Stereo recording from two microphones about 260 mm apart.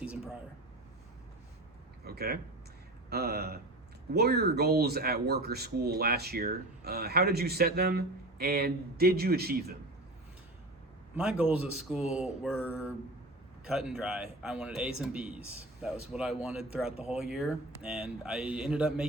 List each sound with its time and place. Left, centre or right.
2.0 s speech: right
11.1 s a man's voice: centre
16.9 s speech: left
17.2 s a man's voice: centre